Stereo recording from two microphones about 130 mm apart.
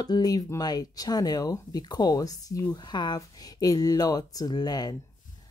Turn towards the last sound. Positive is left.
turn(degrees=30)  # may be behind; listen again after turning